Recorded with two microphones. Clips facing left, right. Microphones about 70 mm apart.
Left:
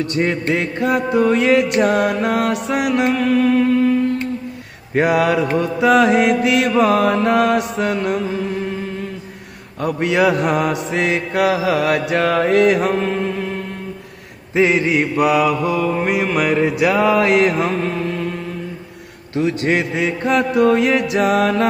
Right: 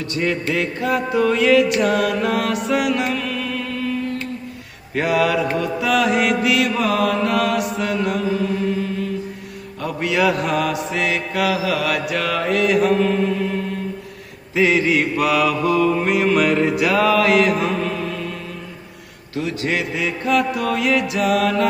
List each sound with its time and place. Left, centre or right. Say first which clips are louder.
0.0 s mantra: left 3 dB; left
9.8 s mantra: left 3 dB; left
14.5 s mantra: left 1 dB; left
16.0 s mantra: right 1 dB; centre; by 17.7 s left
19.3 s mantra: left 5 dB; left